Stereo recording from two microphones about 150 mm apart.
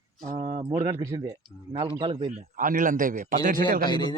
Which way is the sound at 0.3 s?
40° right (ahead or behind).